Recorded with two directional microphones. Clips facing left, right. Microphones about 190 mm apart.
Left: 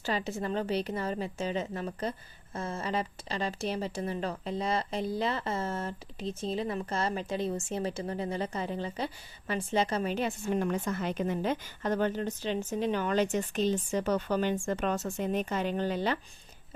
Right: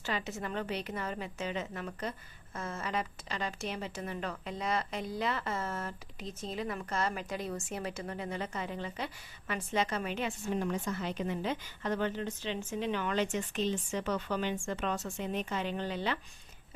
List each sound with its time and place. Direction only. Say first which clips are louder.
0.0 s a woman's voice: left 4 dB; 35° left (ahead or behind)
10.5 s a woman's voice: left 3 dB; 55° left (ahead or behind)